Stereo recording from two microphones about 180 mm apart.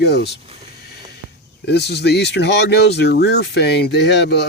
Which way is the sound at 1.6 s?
65° left (ahead or behind).